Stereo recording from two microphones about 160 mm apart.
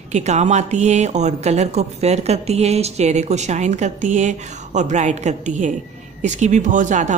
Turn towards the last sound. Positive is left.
turn(degrees=-50)  # may be behind; listen again after turning